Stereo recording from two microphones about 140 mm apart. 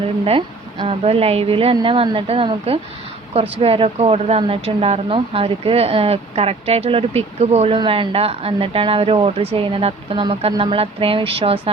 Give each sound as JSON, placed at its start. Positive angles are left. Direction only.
{"t": 0.3, "sound": "a woman's voice", "side_deg": -40}
{"t": 7.8, "sound": "speech", "side_deg": -35}